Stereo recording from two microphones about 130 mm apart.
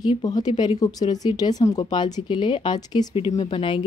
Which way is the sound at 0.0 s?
30° left (ahead or behind).